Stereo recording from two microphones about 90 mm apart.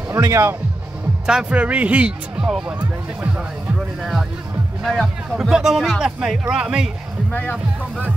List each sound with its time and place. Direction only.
0.1 s speech: 35° right (ahead or behind)
1.2 s speech: 10° right (ahead or behind)
4.0 s a man's voice: 5° right (ahead or behind)
7.2 s speech: 15° left (ahead or behind)